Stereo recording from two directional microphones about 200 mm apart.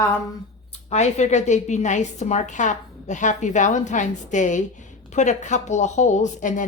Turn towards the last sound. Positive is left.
turn(degrees=40)  # may be behind; listen again after turning